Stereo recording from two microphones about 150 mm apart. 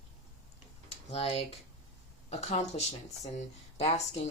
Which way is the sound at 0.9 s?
40° left (ahead or behind).